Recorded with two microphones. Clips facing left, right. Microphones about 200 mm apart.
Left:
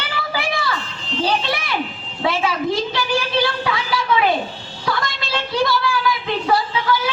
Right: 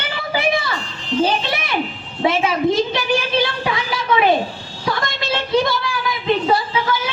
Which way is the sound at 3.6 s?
20° right (ahead or behind).